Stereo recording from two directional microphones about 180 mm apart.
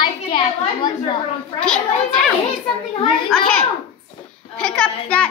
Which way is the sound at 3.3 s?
5° left (ahead or behind).